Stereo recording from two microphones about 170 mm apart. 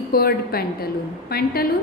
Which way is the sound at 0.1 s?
65° left (ahead or behind).